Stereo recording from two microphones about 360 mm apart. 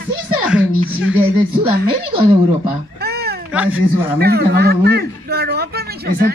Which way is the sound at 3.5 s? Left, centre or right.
Centre.